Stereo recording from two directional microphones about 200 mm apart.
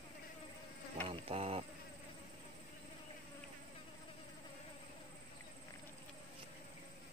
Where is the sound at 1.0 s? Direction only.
30° right (ahead or behind).